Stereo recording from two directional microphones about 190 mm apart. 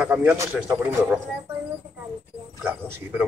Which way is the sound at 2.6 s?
10° right (ahead or behind).